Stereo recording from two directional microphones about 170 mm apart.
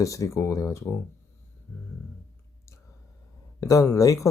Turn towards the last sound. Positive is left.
turn(degrees=20)  # may be behind; listen again after turning